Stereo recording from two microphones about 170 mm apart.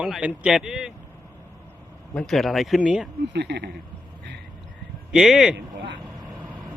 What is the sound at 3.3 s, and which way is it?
Speech, 85° right.